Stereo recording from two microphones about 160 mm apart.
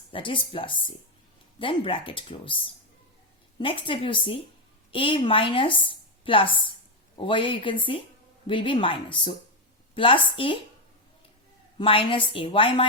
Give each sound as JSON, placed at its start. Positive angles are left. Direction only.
{"t": 0.1, "sound": "speech", "side_deg": 30}
{"t": 3.6, "sound": "a woman's voice", "side_deg": 35}
{"t": 11.8, "sound": "speech", "side_deg": 35}